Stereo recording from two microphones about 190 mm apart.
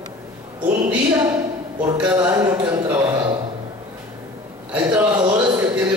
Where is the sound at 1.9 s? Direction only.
10° right (ahead or behind).